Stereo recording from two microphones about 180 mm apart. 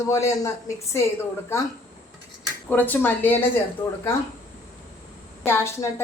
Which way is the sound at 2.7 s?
10° left (ahead or behind).